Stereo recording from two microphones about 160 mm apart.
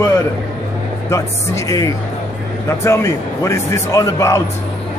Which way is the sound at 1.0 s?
20° left (ahead or behind).